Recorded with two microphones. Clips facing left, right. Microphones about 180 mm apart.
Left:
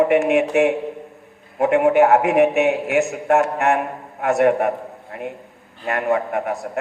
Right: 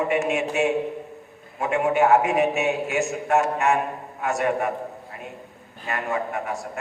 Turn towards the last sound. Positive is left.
turn(degrees=60)  # may be behind; listen again after turning